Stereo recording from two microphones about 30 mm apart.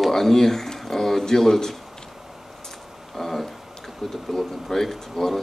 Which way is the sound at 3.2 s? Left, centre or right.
Centre.